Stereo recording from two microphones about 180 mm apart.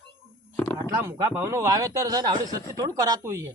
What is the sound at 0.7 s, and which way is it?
Speech, 15° right (ahead or behind).